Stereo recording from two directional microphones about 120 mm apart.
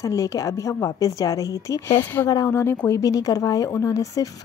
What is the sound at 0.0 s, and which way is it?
Speech, 25° left (ahead or behind).